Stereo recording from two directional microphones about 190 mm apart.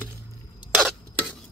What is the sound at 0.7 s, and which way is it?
Stir, centre (ahead or behind).